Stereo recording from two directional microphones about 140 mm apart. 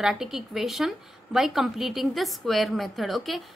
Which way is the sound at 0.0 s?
5° right (ahead or behind).